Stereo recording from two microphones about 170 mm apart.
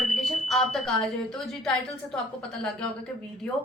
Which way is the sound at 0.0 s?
Centre (ahead or behind).